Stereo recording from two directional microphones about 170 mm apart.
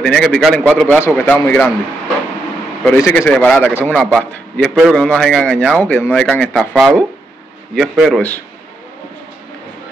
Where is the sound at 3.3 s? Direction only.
5° left (ahead or behind).